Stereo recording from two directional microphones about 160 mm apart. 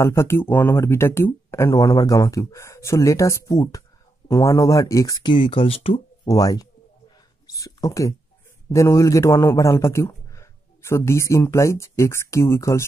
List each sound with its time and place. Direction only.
0.0 s speech: 15° left (ahead or behind); by 6.0 s 35° left (ahead or behind)
6.2 s speech: 25° left (ahead or behind)
7.4 s a sound: 20° left (ahead or behind)
8.6 s a man's voice: 20° left (ahead or behind)